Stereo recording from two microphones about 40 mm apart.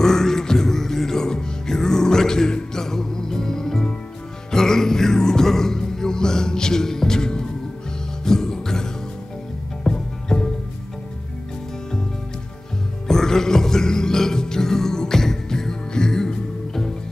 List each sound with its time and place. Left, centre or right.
0.0 s music: centre
9.8 s music: left
13.1 s music: centre